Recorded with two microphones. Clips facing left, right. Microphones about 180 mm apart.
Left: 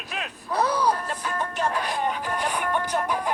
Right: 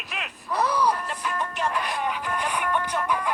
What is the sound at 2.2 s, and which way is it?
Speech, 35° left (ahead or behind).